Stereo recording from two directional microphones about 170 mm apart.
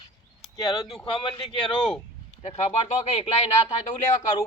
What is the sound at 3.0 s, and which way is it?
Speech, 35° left (ahead or behind).